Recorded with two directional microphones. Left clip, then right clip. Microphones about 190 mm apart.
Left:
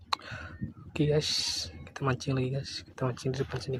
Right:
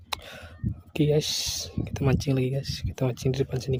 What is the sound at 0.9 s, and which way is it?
Speech, 35° right (ahead or behind).